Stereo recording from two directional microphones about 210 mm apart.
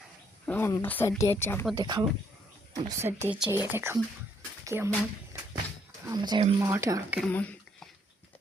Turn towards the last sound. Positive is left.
turn(degrees=5)  # may be behind; listen again after turning